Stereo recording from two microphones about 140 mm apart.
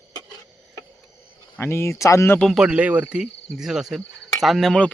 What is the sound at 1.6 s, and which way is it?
Speech, 15° left (ahead or behind).